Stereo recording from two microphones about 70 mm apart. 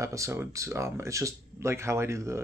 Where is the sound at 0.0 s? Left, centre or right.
Right.